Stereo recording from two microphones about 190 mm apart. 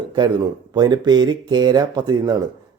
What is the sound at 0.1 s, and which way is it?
A man's voice, 25° right (ahead or behind).